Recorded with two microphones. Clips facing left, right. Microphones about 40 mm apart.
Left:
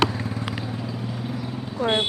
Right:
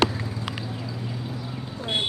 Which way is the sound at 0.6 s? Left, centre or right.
Left.